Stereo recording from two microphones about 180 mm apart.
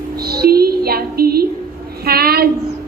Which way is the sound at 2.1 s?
60° right (ahead or behind).